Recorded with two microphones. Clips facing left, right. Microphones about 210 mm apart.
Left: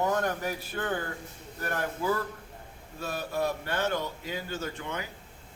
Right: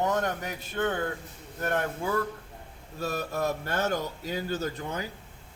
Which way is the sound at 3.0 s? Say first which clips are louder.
Right 1 dB; 40° right (ahead or behind).